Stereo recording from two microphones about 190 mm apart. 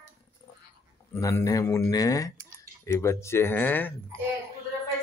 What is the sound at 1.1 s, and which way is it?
Speech, 15° left (ahead or behind).